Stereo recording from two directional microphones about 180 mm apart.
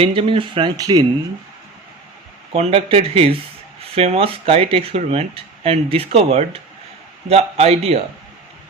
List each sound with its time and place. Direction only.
0.0 s speech: 30° right (ahead or behind)
2.5 s speech: 35° right (ahead or behind)